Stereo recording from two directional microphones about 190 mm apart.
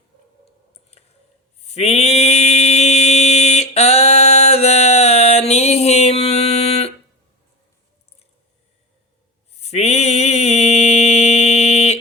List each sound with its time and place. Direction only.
1.6 s mantra: 35° left (ahead or behind)
9.6 s mantra: 35° left (ahead or behind)